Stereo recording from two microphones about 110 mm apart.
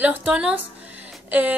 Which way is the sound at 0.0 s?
15° right (ahead or behind).